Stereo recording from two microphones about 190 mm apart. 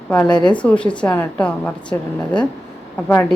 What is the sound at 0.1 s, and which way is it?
A woman's voice, 5° left (ahead or behind).